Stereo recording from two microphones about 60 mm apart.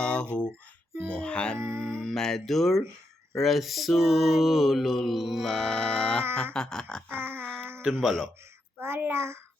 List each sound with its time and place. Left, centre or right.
0.0 s a sound: centre
1.0 s music: centre
3.3 s mantra: centre
6.3 s music: centre
7.1 s a sound: right
7.4 s baby cry: centre
8.0 s mantra: centre
8.8 s a child's voice: right